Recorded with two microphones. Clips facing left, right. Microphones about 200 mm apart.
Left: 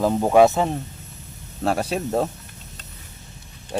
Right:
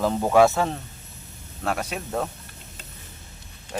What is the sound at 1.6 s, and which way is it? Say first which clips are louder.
Speech: left 6 dB; 30° left (ahead or behind).